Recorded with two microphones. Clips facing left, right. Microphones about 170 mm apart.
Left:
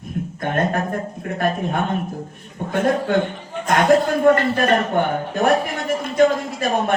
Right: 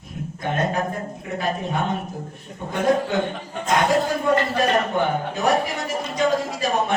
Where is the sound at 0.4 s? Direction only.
55° left (ahead or behind).